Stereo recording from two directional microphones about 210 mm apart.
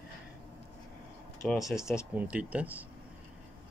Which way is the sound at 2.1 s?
5° right (ahead or behind).